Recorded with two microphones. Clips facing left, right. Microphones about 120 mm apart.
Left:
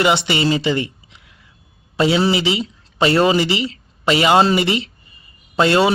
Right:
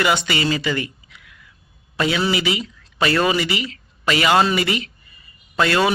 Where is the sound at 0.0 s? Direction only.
25° left (ahead or behind).